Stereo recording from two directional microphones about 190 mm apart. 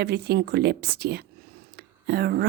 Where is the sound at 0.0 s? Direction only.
60° right (ahead or behind).